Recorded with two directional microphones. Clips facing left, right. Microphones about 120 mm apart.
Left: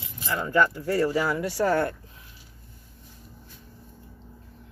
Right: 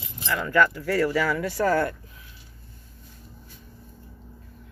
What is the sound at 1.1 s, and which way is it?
Speech, 90° right.